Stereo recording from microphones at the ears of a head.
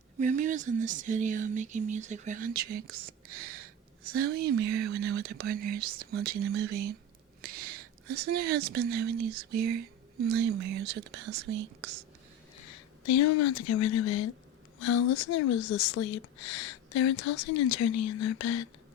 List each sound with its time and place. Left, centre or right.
0.3 s speech: right
12.5 s speech: left